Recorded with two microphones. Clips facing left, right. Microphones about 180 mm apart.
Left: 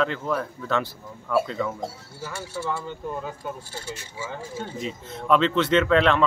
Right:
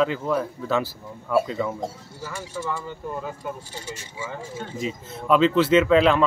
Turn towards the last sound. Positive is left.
turn(degrees=-5)  # may be behind; listen again after turning